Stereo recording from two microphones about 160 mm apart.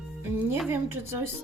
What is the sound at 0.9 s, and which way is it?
Speech, 15° right (ahead or behind).